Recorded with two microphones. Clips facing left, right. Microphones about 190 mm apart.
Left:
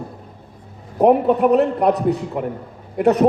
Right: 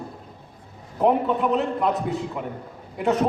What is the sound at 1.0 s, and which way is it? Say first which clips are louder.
A man's voice: left 6 dB; 60° left (ahead or behind).